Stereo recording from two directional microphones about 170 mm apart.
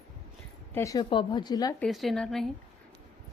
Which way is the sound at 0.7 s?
20° left (ahead or behind).